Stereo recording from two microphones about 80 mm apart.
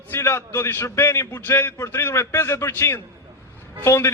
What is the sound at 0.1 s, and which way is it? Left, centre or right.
A man's voice, left.